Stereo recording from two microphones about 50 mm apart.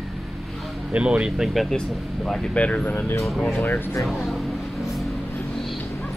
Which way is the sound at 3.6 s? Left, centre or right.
Left.